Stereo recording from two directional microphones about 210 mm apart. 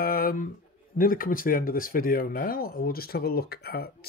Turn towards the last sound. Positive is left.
turn(degrees=45)  # may be behind; listen again after turning